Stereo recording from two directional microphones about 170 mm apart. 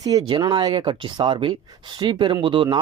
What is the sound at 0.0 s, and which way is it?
Speech, 20° right (ahead or behind).